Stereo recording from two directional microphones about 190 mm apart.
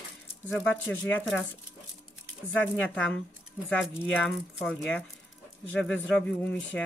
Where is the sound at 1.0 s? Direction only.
5° left (ahead or behind).